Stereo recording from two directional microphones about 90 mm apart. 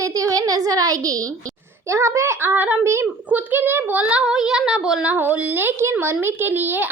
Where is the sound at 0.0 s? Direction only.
40° right (ahead or behind).